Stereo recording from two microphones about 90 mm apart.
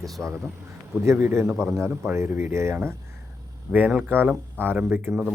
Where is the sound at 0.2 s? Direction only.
20° right (ahead or behind).